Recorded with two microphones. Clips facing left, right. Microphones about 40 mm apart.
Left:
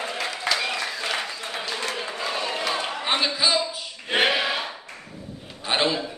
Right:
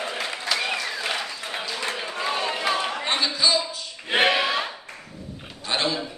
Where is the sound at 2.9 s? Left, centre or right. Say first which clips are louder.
Left 1 dB; centre.